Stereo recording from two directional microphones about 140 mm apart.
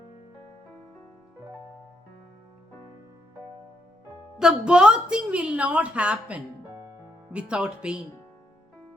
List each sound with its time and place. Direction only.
4.4 s a woman's voice: 5° right (ahead or behind)